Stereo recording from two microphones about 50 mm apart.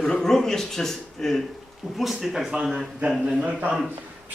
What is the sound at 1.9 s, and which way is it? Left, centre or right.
Speech, centre.